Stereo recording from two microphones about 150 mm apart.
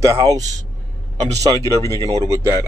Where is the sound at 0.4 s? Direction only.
55° right (ahead or behind).